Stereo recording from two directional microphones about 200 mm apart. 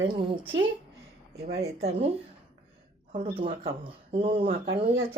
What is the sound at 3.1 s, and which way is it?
Speech, 25° right (ahead or behind).